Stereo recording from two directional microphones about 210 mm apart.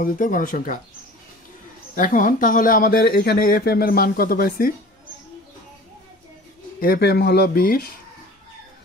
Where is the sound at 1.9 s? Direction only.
40° left (ahead or behind).